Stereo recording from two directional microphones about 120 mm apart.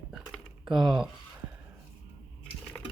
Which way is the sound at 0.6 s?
5° right (ahead or behind).